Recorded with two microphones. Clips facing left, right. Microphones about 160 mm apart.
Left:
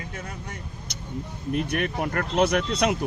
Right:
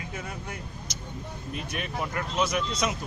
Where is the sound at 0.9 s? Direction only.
65° left (ahead or behind).